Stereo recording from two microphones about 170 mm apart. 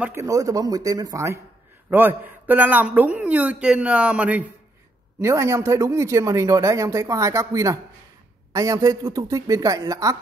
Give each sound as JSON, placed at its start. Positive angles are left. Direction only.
{"t": 0.0, "sound": "a woman's voice", "side_deg": -15}